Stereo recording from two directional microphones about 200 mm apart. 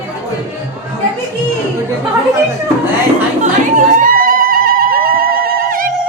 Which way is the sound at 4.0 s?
45° right (ahead or behind).